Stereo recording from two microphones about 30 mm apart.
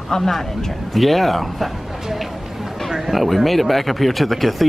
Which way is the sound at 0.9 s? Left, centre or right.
Centre.